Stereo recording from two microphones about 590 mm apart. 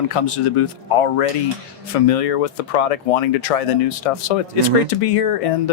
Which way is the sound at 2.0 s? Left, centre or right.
Left.